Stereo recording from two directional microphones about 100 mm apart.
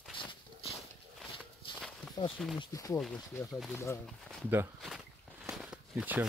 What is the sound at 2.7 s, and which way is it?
Speech, 35° left (ahead or behind).